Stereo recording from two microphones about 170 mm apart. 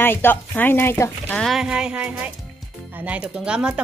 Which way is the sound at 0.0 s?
10° left (ahead or behind).